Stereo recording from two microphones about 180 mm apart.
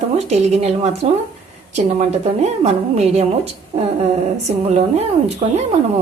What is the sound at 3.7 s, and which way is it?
A woman's voice, 35° right (ahead or behind).